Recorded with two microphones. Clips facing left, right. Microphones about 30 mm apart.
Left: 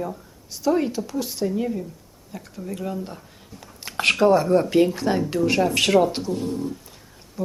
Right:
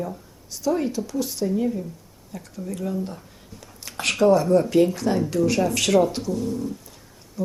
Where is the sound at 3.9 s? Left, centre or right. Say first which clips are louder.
Left 5 dB; left.